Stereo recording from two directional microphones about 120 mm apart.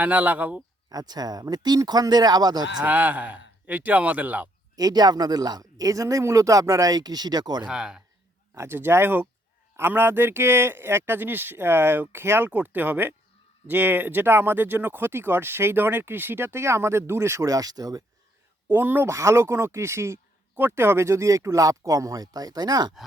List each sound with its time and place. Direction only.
0.0 s speech: 15° right (ahead or behind)
0.9 s a man's voice: 35° right (ahead or behind)
2.8 s speech: 15° right (ahead or behind)
4.8 s a man's voice: 35° right (ahead or behind)
7.6 s speech: 5° right (ahead or behind)
8.5 s speech: 20° right (ahead or behind)
18.7 s speech: 20° right (ahead or behind); by 22.9 s 35° right (ahead or behind)